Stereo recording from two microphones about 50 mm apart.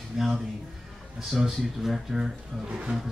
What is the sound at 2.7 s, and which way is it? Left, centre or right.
Speech, right.